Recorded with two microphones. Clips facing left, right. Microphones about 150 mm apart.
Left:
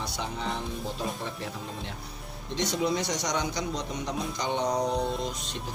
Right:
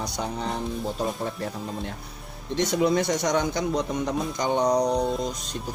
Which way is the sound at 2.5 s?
55° right (ahead or behind).